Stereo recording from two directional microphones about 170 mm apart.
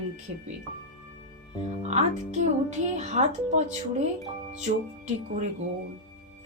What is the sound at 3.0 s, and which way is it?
Speech, 45° right (ahead or behind).